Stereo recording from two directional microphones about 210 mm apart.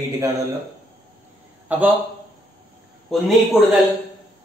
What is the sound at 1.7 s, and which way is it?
Speech, 10° right (ahead or behind).